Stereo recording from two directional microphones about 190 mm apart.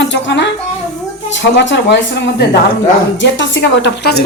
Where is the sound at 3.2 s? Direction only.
70° left (ahead or behind).